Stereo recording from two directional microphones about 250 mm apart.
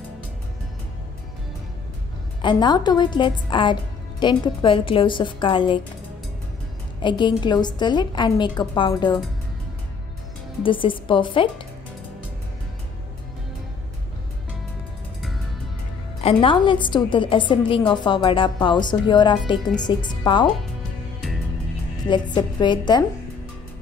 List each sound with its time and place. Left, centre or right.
2.4 s a woman's voice: centre
7.0 s a woman's voice: centre
10.6 s a woman's voice: centre
16.2 s a woman's voice: left
22.1 s a woman's voice: centre